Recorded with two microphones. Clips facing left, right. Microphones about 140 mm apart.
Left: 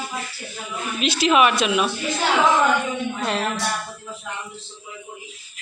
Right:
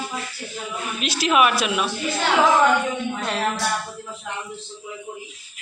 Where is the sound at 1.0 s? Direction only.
Centre (ahead or behind).